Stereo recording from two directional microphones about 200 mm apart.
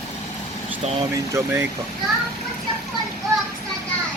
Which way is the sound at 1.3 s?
15° right (ahead or behind).